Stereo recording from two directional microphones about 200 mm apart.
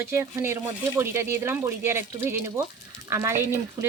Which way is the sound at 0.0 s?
15° right (ahead or behind).